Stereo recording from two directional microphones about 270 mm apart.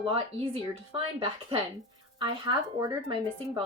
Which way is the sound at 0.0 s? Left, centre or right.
Centre.